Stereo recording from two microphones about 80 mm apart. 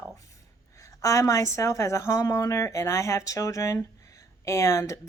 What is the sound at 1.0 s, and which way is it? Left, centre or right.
A woman's voice, left.